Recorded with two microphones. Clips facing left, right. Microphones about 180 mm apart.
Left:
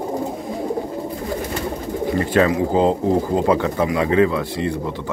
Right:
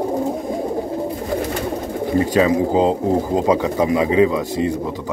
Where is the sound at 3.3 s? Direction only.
15° right (ahead or behind).